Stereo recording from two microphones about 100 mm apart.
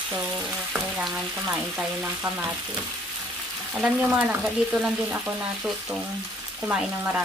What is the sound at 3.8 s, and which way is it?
Frying, 15° right (ahead or behind).